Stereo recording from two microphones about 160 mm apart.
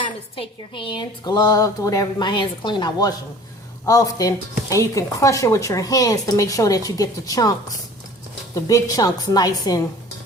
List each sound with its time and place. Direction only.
0.0 s a woman's voice: 35° left (ahead or behind)
8.5 s a woman's voice: 20° left (ahead or behind)